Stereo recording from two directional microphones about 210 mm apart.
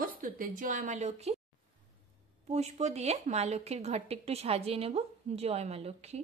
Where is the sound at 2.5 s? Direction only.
30° right (ahead or behind).